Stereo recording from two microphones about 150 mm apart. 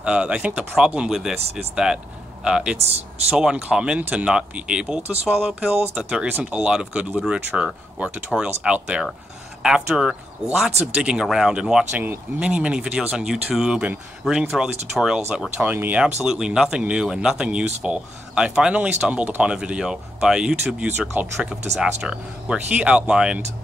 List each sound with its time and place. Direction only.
0.0 s speech: 5° right (ahead or behind)